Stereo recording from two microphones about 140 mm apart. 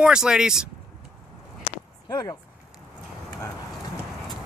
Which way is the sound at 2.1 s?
25° left (ahead or behind).